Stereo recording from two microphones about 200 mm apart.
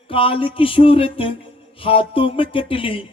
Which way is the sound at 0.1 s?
25° left (ahead or behind).